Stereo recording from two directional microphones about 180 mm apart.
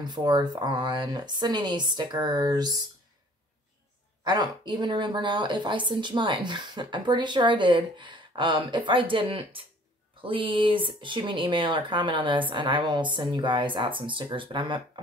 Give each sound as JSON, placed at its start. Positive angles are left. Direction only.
{"t": 0.0, "sound": "speech", "side_deg": -25}
{"t": 4.2, "sound": "speech", "side_deg": -25}